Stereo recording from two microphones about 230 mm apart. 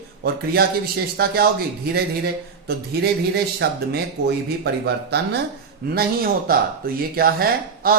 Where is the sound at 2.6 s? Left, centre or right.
Right.